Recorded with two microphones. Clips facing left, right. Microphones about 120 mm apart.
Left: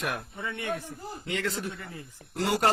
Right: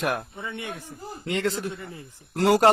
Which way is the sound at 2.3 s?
75° right (ahead or behind).